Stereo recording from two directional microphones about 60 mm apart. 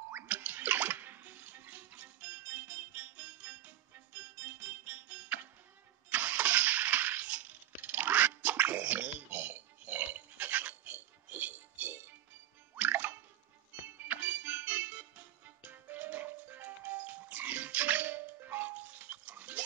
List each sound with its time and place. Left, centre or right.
0.3 s bathtub: right
6.0 s engine starting: right
12.7 s music: right